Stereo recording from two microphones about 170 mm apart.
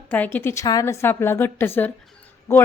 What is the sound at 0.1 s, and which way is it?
A woman's voice, 10° left (ahead or behind).